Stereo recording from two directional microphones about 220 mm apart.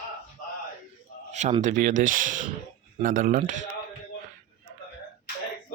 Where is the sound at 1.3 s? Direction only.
30° right (ahead or behind).